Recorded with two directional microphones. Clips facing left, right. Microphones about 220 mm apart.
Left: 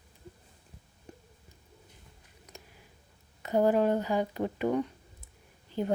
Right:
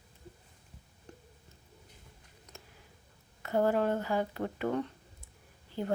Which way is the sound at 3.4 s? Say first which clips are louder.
Left 3 dB; 15° left (ahead or behind).